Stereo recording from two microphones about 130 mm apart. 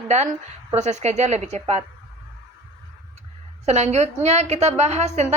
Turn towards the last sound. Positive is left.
turn(degrees=-60)  # may be behind; listen again after turning